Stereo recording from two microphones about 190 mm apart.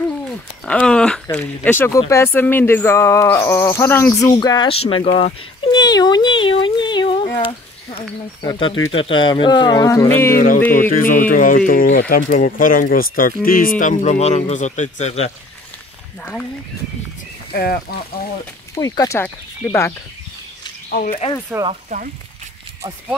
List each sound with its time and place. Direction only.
0.7 s a sound: 5° left (ahead or behind)
1.3 s speech: 10° left (ahead or behind); by 5.1 s 30° left (ahead or behind)
5.2 s a sound: 25° left (ahead or behind)
8.4 s speech: 25° left (ahead or behind)
10.3 s a man's voice: 45° left (ahead or behind)
17.5 s speech: 55° left (ahead or behind)
18.8 s speech: 15° left (ahead or behind)
20.9 s speech: 50° left (ahead or behind)
21.5 s speech: 10° right (ahead or behind)
21.8 s speech: 45° right (ahead or behind)